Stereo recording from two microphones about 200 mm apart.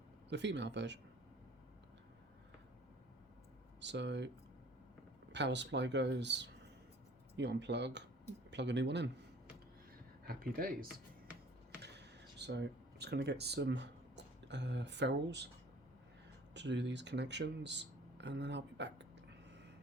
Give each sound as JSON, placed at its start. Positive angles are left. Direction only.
{"t": 0.3, "sound": "speech", "side_deg": -60}
{"t": 3.8, "sound": "speech", "side_deg": -60}
{"t": 5.3, "sound": "speech", "side_deg": -60}
{"t": 10.2, "sound": "speech", "side_deg": -45}
{"t": 11.8, "sound": "a sound", "side_deg": -55}
{"t": 16.6, "sound": "speech", "side_deg": -60}
{"t": 19.5, "sound": "a sound", "side_deg": -60}